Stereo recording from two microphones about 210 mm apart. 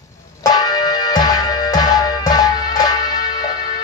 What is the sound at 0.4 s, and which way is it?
Music, 20° left (ahead or behind).